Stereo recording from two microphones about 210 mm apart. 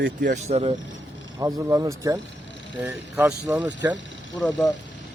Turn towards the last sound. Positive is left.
turn(degrees=0)  # may be behind; listen again after turning